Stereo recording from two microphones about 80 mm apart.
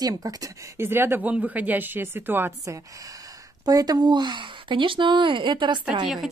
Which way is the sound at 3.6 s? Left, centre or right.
Right.